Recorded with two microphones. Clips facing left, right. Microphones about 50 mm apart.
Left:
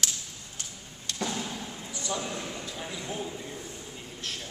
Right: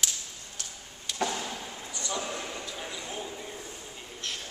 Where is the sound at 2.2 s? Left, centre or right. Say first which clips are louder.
Right 3 dB; centre.